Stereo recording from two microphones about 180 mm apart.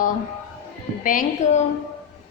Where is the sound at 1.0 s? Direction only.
45° left (ahead or behind).